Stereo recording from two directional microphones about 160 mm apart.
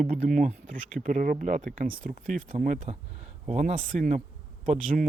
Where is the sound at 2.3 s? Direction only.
Centre (ahead or behind).